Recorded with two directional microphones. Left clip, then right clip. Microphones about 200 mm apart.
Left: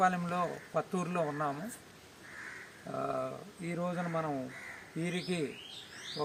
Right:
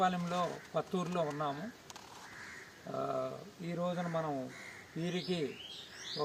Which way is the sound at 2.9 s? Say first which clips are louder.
Left 1 dB; centre (ahead or behind).